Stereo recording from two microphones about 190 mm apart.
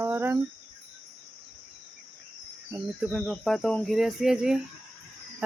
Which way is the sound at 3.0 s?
Centre (ahead or behind).